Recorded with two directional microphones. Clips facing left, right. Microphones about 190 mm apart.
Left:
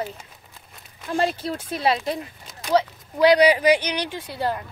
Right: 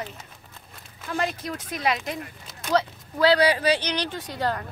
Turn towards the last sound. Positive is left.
turn(degrees=10)  # may be behind; listen again after turning